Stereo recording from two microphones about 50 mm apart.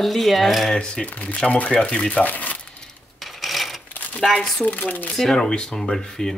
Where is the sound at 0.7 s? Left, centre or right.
Centre.